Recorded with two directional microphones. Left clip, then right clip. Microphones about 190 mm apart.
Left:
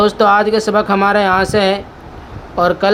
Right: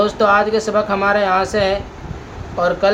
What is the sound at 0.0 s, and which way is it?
Speech, 55° left (ahead or behind).